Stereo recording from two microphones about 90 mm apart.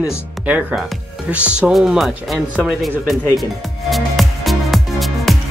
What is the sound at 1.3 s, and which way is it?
Speech, 15° right (ahead or behind).